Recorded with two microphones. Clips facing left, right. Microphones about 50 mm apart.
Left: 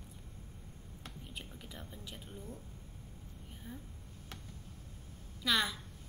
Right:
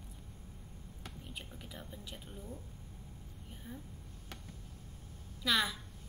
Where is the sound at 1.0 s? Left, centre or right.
Centre.